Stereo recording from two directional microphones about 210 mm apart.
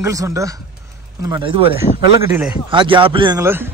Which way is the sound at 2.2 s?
10° right (ahead or behind).